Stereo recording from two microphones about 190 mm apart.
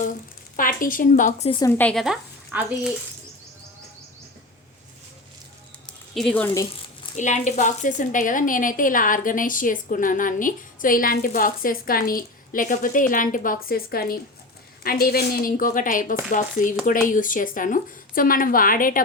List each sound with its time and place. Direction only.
0.5 s a woman's voice: 45° left (ahead or behind)
1.5 s a woman's voice: 25° left (ahead or behind)
1.7 s speech: 5° left (ahead or behind)
5.8 s speech: 5° left (ahead or behind)
7.2 s a woman's voice: 40° left (ahead or behind)